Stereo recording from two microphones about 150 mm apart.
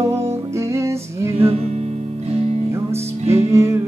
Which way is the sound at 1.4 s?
45° right (ahead or behind).